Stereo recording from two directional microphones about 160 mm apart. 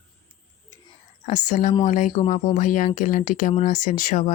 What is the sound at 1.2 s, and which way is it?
Speech, 50° left (ahead or behind).